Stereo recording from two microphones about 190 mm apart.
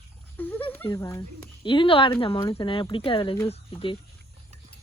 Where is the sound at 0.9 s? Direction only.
15° left (ahead or behind).